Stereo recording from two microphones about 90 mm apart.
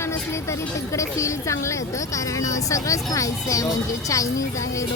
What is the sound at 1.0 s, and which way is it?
Speech, 35° left (ahead or behind).